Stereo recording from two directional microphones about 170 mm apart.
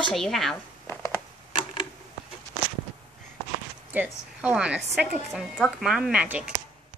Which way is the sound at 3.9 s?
10° right (ahead or behind).